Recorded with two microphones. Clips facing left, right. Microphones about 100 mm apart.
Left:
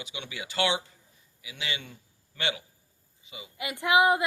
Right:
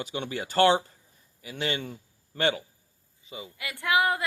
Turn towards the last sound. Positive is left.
turn(degrees=20)  # may be behind; listen again after turning